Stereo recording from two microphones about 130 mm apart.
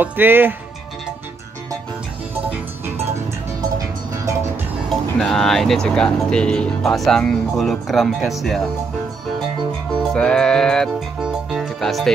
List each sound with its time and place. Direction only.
0.0 s speech: 15° right (ahead or behind)
4.8 s speech: 5° left (ahead or behind)
10.1 s music: 5° left (ahead or behind)